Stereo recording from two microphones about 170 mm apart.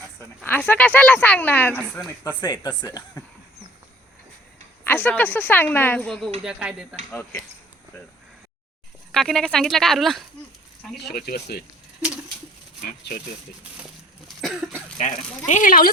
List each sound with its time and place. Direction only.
0.4 s speech: 10° left (ahead or behind)
2.4 s speech: 25° left (ahead or behind)
4.8 s speech: 10° left (ahead or behind)
6.4 s speech: 5° right (ahead or behind)
7.1 s speech: 10° left (ahead or behind)
9.1 s speech: centre (ahead or behind)
11.1 s speech: 65° left (ahead or behind)
14.3 s cough: centre (ahead or behind)
14.9 s speech: 45° left (ahead or behind)